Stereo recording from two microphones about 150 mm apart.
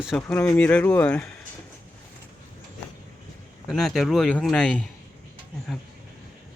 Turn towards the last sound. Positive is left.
turn(degrees=0)  # may be behind; listen again after turning